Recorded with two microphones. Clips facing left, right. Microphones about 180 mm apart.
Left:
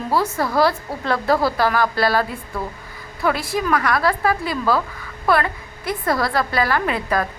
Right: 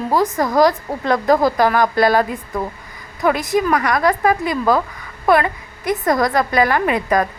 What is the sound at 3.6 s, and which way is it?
Speech, 15° right (ahead or behind).